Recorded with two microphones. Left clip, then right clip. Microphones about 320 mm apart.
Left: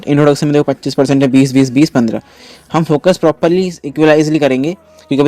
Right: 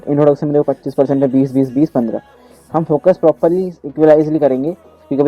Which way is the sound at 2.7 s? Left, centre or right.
Left.